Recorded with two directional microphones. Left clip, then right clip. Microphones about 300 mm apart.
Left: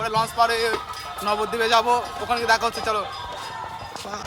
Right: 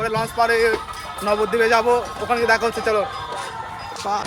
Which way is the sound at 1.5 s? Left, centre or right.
Centre.